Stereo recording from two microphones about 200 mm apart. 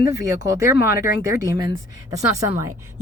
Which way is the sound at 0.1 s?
15° right (ahead or behind).